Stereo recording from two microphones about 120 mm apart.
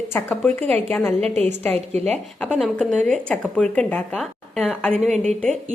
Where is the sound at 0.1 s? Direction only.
15° left (ahead or behind).